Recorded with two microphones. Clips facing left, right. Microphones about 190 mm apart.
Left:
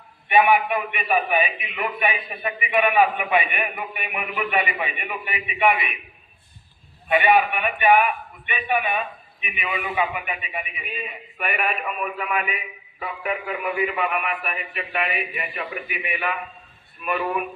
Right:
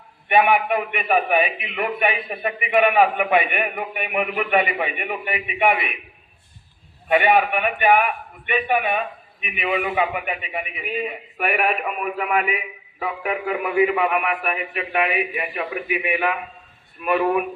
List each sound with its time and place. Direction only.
0.3 s a man's voice: 55° right (ahead or behind)
7.1 s a man's voice: 55° right (ahead or behind)